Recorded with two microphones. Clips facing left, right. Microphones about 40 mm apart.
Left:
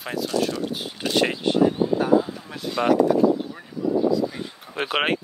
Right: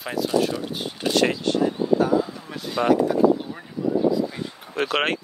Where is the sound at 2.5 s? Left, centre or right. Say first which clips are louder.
Even; centre.